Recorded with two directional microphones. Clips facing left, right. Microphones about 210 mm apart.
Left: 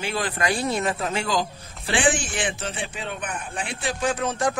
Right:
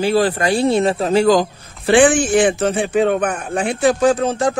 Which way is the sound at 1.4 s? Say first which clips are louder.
Right 7 dB; 55° right (ahead or behind).